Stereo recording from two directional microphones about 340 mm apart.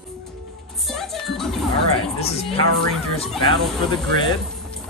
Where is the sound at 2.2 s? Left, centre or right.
Centre.